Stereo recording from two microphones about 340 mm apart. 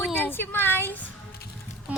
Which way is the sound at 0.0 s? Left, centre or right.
Centre.